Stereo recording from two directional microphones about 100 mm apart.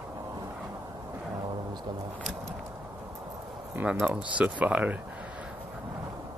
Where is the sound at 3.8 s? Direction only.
20° right (ahead or behind).